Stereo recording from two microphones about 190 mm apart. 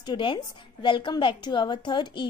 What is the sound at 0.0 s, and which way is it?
A woman's voice, 25° left (ahead or behind).